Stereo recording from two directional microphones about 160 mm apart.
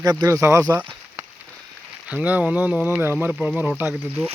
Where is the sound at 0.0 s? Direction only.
25° right (ahead or behind).